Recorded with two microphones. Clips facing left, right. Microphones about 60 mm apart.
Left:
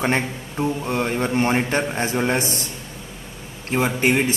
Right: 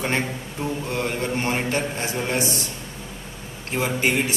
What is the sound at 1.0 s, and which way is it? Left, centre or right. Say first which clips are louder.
A man's voice: left 5 dB; left.